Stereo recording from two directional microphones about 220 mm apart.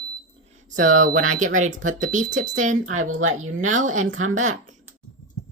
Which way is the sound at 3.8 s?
35° right (ahead or behind).